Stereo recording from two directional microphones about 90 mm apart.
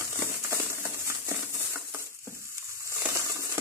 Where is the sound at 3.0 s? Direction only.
35° right (ahead or behind).